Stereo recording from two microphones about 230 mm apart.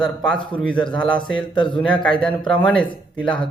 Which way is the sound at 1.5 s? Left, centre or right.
Left.